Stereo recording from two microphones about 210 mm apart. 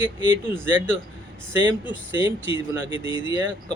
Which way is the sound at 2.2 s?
25° left (ahead or behind).